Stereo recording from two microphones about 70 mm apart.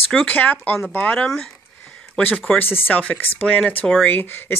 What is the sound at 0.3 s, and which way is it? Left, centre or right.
Speech, left.